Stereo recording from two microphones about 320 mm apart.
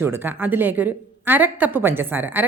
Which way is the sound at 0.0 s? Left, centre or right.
Centre.